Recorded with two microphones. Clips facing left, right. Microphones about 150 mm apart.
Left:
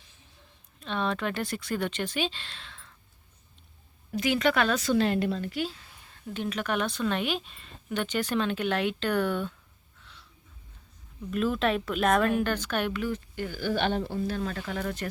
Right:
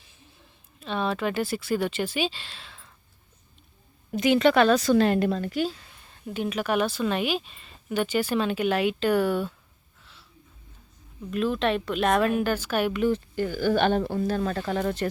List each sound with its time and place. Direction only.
0.8 s speech: 5° right (ahead or behind)
4.1 s a woman's voice: 25° right (ahead or behind); by 5.7 s 45° right (ahead or behind)
6.2 s a woman's voice: 10° right (ahead or behind)
10.0 s a sound: 5° right (ahead or behind)
11.3 s speech: centre (ahead or behind)
13.0 s speech: 30° right (ahead or behind)